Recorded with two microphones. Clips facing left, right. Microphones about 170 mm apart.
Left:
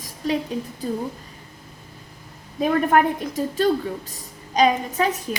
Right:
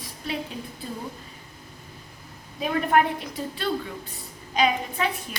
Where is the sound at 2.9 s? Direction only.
45° left (ahead or behind).